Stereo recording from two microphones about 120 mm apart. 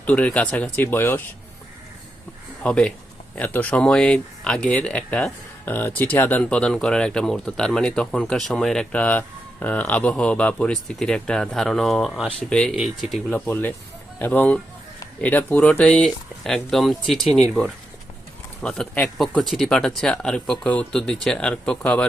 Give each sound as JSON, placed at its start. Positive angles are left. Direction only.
{"t": 0.0, "sound": "speech", "side_deg": 10}
{"t": 2.6, "sound": "speech", "side_deg": 10}
{"t": 13.3, "sound": "speech", "side_deg": 15}
{"t": 18.6, "sound": "speech", "side_deg": 5}